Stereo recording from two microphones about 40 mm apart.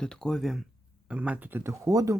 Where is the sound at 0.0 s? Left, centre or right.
Centre.